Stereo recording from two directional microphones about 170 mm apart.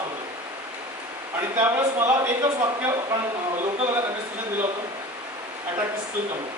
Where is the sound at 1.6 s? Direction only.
15° right (ahead or behind).